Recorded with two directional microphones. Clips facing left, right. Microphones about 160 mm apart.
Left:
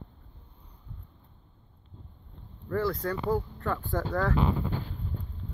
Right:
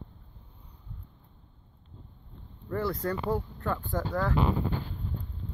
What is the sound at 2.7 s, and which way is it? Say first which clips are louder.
Speech: left 1 dB; 25° right (ahead or behind).